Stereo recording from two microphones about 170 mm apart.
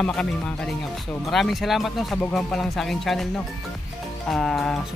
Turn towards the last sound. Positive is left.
turn(degrees=0)  # may be behind; listen again after turning